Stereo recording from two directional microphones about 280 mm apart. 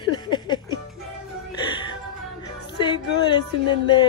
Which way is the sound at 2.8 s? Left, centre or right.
Centre.